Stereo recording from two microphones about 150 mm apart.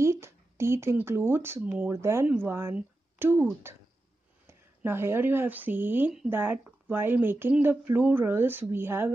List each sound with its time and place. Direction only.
0.0 s speech: 20° right (ahead or behind)
4.5 s speech: 15° right (ahead or behind)